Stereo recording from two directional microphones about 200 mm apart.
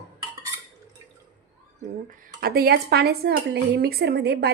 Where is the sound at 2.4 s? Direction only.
50° right (ahead or behind).